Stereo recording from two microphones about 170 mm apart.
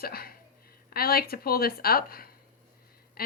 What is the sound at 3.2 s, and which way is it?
Duck, 60° left (ahead or behind).